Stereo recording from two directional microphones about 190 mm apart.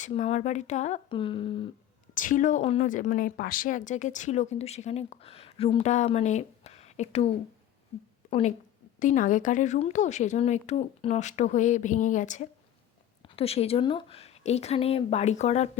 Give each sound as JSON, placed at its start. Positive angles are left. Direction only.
{"t": 0.0, "sound": "a woman's voice", "side_deg": 35}
{"t": 2.1, "sound": "a woman's voice", "side_deg": 45}
{"t": 8.3, "sound": "a woman's voice", "side_deg": 35}